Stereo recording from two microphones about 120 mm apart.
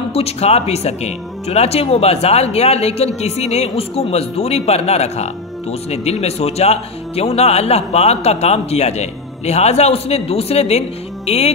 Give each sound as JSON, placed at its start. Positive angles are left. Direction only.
{"t": 0.1, "sound": "speech", "side_deg": 60}